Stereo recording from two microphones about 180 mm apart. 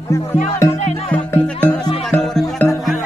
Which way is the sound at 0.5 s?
15° left (ahead or behind).